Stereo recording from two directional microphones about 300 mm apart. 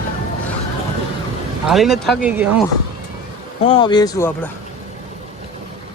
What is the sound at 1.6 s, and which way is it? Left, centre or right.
Speech, centre.